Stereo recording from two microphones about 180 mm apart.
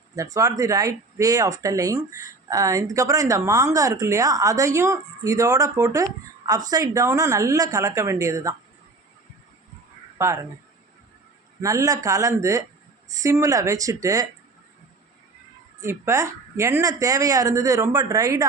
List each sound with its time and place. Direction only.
0.2 s speech: 20° right (ahead or behind)
10.2 s speech: 15° right (ahead or behind)
11.6 s speech: 20° right (ahead or behind)
15.8 s speech: 15° right (ahead or behind)